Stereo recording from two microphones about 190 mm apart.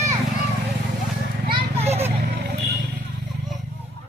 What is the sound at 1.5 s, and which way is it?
Children playing, 30° right (ahead or behind).